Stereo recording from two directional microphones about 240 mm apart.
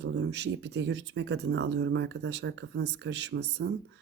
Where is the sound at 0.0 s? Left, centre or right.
Right.